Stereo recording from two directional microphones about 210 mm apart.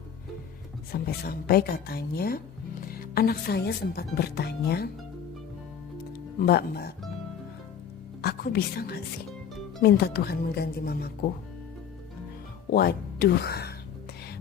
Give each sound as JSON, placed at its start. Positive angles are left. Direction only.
{"t": 0.9, "sound": "speech", "side_deg": 45}
{"t": 6.4, "sound": "speech", "side_deg": 50}
{"t": 8.2, "sound": "a woman's voice", "side_deg": 45}
{"t": 12.7, "sound": "speech", "side_deg": 45}